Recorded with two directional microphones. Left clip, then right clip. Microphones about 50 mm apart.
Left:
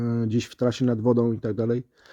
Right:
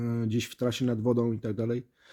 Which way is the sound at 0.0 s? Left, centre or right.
Left.